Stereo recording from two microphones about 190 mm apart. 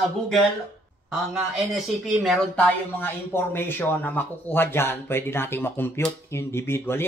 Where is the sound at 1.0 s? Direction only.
Centre (ahead or behind).